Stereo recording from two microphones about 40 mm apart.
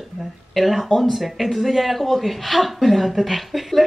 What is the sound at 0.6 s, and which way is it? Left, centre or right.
Speech, centre.